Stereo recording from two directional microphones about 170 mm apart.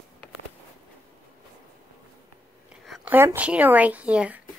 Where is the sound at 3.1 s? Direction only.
10° right (ahead or behind).